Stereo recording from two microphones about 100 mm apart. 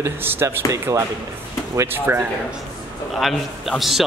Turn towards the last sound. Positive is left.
turn(degrees=0)  # may be behind; listen again after turning